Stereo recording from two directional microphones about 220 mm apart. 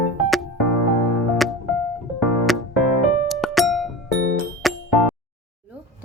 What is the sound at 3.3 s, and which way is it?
Music, centre (ahead or behind).